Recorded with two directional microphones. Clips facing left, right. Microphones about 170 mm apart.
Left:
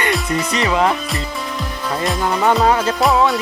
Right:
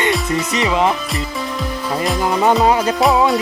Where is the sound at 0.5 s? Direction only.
20° right (ahead or behind).